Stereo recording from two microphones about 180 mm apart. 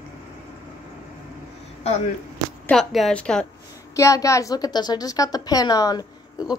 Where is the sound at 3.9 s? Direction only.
15° left (ahead or behind).